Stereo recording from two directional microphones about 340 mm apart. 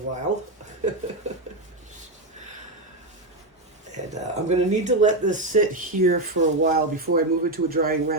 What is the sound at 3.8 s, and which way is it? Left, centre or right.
Speech, right.